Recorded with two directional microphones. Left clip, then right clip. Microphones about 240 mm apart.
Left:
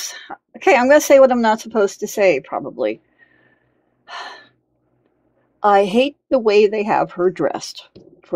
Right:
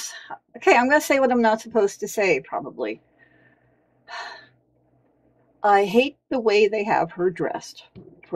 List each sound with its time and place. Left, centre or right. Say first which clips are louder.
0.0 s speech: left 5 dB; left
4.0 s gasp: left 3 dB; left
5.6 s speech: left 4 dB; left